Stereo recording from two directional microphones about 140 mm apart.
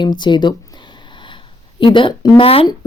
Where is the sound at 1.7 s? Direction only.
35° left (ahead or behind).